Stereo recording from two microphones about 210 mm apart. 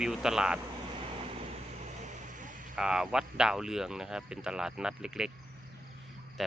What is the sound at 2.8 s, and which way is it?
Speech, 5° right (ahead or behind).